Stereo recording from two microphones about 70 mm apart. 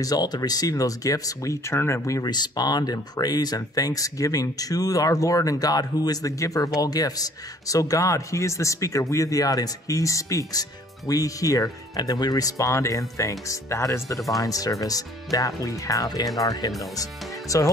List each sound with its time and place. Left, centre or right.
0.0 s speech: left
2.2 s speech: left
6.8 s speech: left